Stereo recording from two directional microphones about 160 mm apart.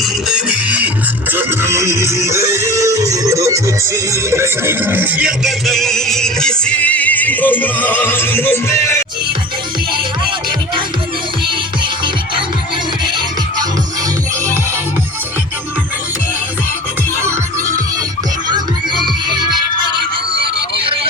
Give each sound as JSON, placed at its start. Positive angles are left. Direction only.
{"t": 0.0, "sound": "music", "side_deg": -5}
{"t": 18.4, "sound": "music", "side_deg": -25}